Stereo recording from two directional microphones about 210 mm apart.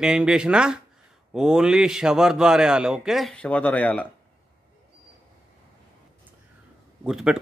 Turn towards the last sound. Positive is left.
turn(degrees=-5)  # may be behind; listen again after turning